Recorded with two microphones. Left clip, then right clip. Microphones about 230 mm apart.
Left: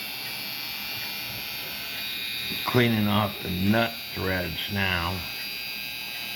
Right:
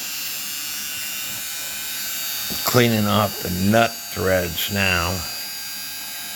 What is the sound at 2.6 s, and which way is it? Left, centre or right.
Speech, right.